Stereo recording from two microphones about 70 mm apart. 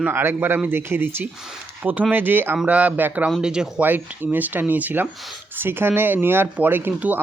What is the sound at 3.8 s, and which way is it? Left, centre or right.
A man's voice, right.